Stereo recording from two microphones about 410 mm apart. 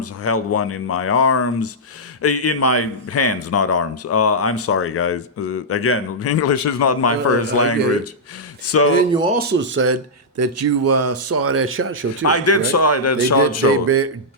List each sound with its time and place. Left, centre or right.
0.0 s a man's voice: left
9.1 s speech: right
12.2 s a man's voice: left
13.8 s speech: right